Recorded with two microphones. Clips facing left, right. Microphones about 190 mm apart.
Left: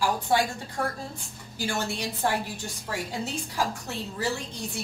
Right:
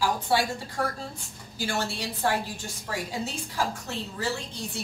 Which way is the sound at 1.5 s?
15° left (ahead or behind).